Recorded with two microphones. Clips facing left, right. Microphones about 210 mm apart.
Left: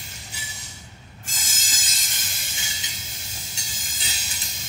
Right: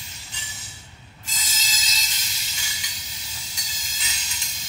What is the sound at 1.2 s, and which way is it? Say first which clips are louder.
Train wheels squealing: right 2 dB; 50° left (ahead or behind).